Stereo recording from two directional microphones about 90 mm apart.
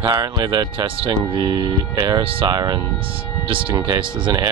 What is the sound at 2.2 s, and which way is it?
Speech, 80° right.